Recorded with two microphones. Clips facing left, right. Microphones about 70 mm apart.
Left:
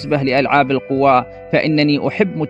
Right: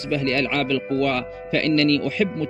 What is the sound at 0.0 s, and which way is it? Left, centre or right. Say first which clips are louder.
A man's voice: left 7 dB; left.